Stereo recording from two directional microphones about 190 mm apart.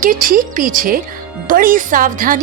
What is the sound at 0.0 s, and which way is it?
A woman's voice, 45° right (ahead or behind).